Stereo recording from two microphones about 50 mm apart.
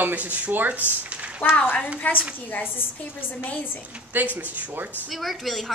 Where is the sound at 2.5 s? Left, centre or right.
Left.